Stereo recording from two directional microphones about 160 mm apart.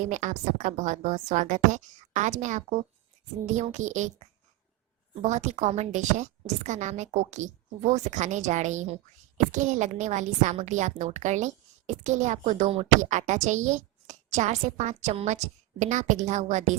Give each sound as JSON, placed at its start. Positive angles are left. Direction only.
{"t": 0.0, "sound": "a woman's voice", "side_deg": -50}